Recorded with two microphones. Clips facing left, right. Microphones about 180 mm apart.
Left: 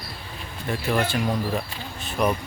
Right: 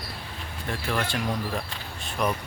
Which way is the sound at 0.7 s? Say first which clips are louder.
Left 5 dB; 5° left (ahead or behind).